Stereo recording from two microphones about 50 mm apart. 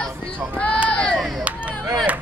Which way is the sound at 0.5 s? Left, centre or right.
Left.